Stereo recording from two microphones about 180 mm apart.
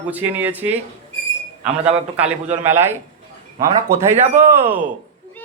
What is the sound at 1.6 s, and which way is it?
Speech, 35° right (ahead or behind).